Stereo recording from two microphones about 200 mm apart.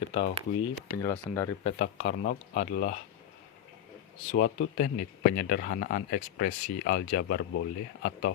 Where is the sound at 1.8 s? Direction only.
45° left (ahead or behind).